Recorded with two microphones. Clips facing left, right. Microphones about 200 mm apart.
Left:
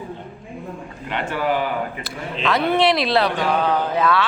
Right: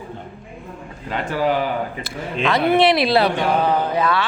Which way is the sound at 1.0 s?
40° right (ahead or behind).